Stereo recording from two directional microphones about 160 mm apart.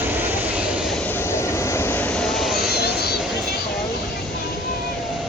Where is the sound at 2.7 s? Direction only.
85° left.